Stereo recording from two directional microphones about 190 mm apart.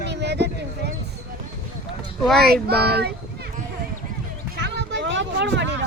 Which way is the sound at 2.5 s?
55° right (ahead or behind).